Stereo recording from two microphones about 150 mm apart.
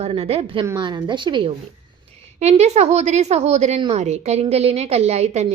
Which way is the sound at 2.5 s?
45° right (ahead or behind).